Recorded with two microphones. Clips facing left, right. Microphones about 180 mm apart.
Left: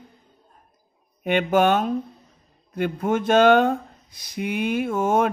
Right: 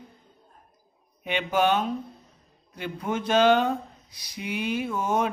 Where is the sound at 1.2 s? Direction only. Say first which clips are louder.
Left 5 dB; 50° left (ahead or behind).